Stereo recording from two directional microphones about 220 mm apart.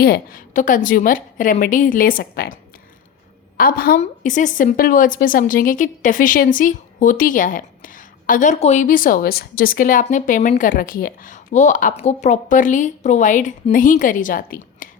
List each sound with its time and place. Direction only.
0.0 s a woman's voice: 40° left (ahead or behind)
3.6 s a woman's voice: 40° left (ahead or behind)